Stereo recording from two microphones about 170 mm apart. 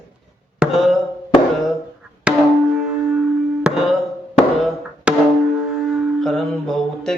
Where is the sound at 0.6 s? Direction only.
5° right (ahead or behind).